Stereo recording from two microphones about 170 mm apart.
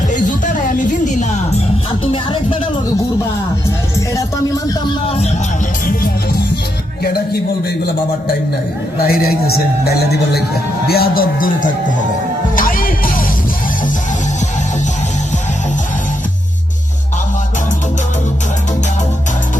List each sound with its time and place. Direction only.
0.1 s music: 50° left (ahead or behind); by 2.6 s 30° left (ahead or behind)
4.1 s music: 20° left (ahead or behind)
5.0 s music: 35° left (ahead or behind)
9.0 s speech: 65° left (ahead or behind)
9.8 s music: 70° left (ahead or behind)
10.8 s speech: 65° left (ahead or behind)
12.5 s music: 55° left (ahead or behind)